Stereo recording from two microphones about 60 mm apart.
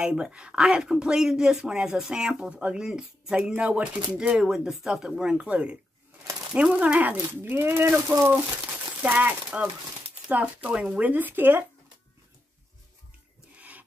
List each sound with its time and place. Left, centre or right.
0.0 s speech: centre
4.4 s speech: centre; by 7.2 s right
7.4 s speech: right
8.1 s speech: right
13.6 s filing: right